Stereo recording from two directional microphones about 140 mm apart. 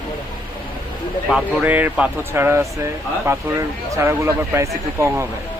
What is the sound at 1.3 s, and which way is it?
Speech, 10° right (ahead or behind).